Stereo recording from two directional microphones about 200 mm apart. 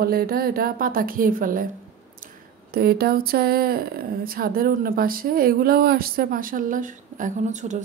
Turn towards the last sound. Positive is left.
turn(degrees=-35)  # may be behind; listen again after turning